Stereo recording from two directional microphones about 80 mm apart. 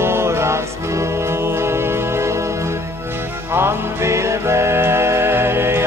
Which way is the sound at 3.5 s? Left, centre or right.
Right.